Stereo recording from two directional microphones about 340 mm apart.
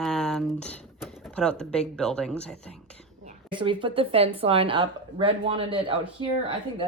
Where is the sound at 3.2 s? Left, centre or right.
Centre.